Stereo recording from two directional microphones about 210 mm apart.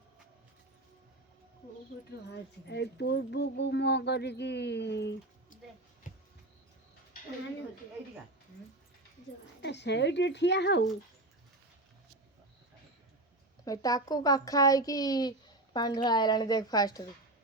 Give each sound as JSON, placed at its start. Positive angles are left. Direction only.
{"t": 2.3, "sound": "speech", "side_deg": 55}
{"t": 9.6, "sound": "speech", "side_deg": 55}
{"t": 13.7, "sound": "a woman's voice", "side_deg": 15}